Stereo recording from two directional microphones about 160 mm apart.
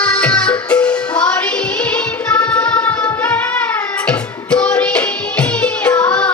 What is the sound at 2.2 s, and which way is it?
Music, 10° left (ahead or behind).